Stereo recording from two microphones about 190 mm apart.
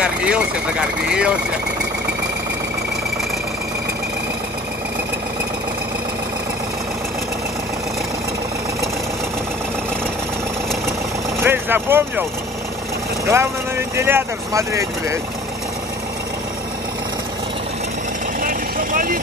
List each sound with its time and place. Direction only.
0.0 s speech: 5° right (ahead or behind)
11.4 s speech: 10° right (ahead or behind)
13.3 s speech: 15° right (ahead or behind)
18.4 s vehicle: 45° right (ahead or behind)